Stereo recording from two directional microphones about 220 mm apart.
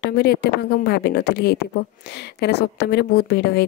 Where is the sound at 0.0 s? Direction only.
50° left (ahead or behind).